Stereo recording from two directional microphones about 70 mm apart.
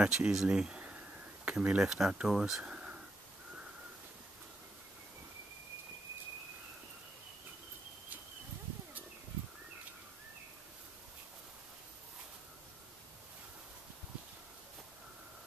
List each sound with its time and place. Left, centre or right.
0.0 s speech: centre
1.8 s speech: centre
2.6 s a sound: centre